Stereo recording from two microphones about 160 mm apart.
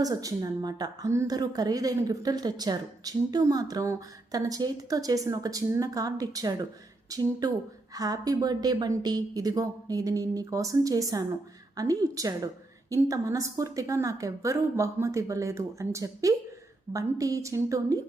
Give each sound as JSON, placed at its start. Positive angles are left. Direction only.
{"t": 0.0, "sound": "a woman's voice", "side_deg": -20}